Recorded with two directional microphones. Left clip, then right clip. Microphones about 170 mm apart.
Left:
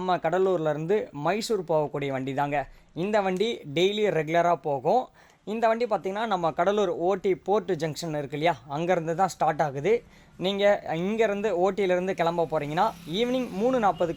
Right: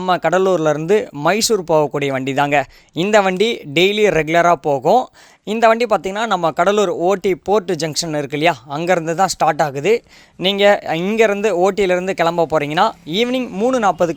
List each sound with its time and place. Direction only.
0.0 s speech: 35° right (ahead or behind)